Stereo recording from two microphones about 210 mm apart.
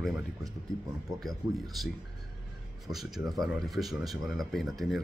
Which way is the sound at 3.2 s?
20° right (ahead or behind).